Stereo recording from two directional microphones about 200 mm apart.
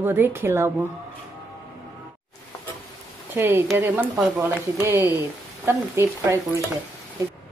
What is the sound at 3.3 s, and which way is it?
Speech, 10° right (ahead or behind).